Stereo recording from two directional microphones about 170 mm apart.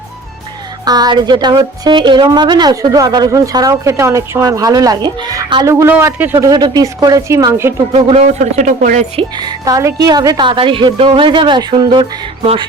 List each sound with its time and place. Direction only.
0.9 s a woman's voice: 25° right (ahead or behind)
7.9 s speech: 40° right (ahead or behind)
9.4 s a woman's voice: 20° right (ahead or behind)